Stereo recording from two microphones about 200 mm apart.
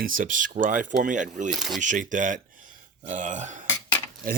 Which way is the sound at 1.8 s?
40° right (ahead or behind).